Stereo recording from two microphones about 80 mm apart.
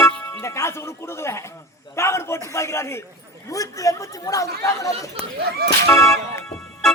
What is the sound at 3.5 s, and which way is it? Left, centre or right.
Speech, left.